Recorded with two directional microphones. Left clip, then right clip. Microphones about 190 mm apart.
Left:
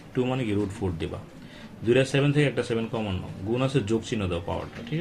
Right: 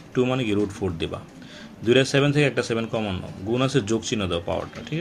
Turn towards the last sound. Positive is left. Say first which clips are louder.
# right 4 dB
turn(degrees=-30)  # may be behind; listen again after turning